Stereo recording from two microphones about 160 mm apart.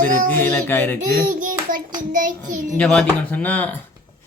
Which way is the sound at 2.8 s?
5° left (ahead or behind).